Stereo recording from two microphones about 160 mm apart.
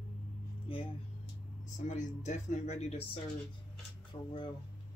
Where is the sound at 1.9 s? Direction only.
50° left (ahead or behind).